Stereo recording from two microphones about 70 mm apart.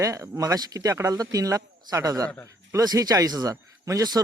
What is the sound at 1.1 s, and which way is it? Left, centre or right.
Speech, right.